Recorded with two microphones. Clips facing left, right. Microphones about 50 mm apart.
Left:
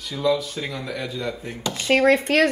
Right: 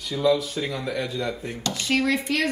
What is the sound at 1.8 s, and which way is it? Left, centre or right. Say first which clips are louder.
Speech: left 6 dB; left.